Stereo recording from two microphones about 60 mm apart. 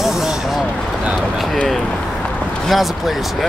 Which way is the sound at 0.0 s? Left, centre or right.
Centre.